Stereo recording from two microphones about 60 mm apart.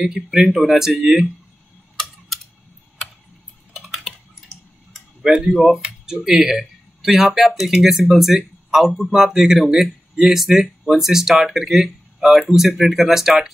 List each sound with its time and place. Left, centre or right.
0.0 s speech: centre
2.0 s typing: centre
3.7 s typing: centre
5.2 s speech: centre
5.5 s speech: centre